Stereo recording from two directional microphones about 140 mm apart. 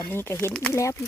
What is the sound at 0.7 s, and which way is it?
Speech, 20° left (ahead or behind).